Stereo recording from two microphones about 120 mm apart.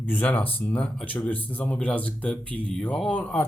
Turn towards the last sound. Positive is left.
turn(degrees=10)  # may be behind; listen again after turning